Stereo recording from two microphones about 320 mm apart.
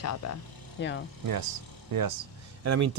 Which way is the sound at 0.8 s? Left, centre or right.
Left.